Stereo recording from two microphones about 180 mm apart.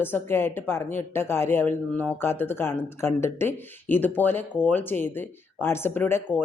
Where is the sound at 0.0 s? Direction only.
10° left (ahead or behind).